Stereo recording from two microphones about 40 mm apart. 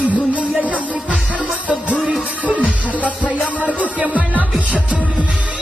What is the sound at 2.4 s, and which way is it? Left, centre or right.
Music, right.